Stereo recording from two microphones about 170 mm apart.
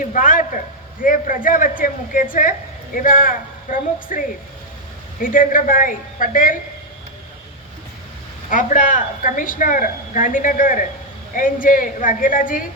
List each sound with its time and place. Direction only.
0.1 s a sound: 50° left (ahead or behind)
1.0 s a woman's voice: 55° left (ahead or behind)
5.2 s a woman's voice: 55° left (ahead or behind)
8.4 s a woman's voice: 50° left (ahead or behind)